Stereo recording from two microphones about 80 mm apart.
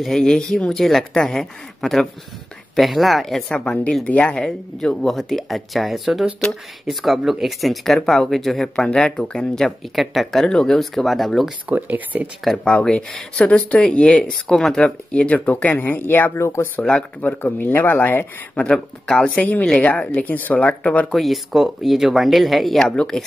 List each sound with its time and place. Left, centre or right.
0.0 s speech: centre
11.7 s speech: right
12.4 s speech: centre
16.3 s speech: left
17.2 s speech: left
18.7 s speech: centre
21.1 s speech: centre